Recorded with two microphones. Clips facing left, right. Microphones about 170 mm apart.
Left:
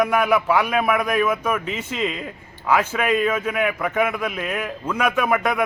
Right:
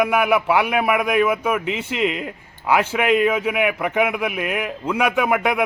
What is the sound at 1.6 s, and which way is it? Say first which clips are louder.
Speech: right 3 dB; 75° right (ahead or behind).